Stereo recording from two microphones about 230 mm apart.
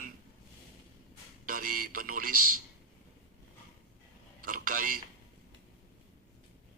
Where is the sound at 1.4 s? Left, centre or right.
Right.